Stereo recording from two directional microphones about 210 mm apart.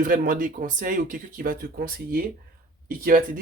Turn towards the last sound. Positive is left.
turn(degrees=-40)  # may be behind; listen again after turning